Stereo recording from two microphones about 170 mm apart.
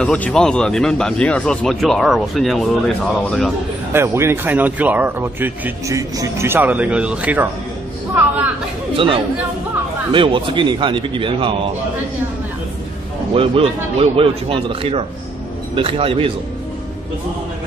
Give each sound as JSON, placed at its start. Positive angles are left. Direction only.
{"t": 0.0, "sound": "speech", "side_deg": 5}
{"t": 3.9, "sound": "speech", "side_deg": -15}
{"t": 8.9, "sound": "speech", "side_deg": -30}
{"t": 13.3, "sound": "a man's voice", "side_deg": -35}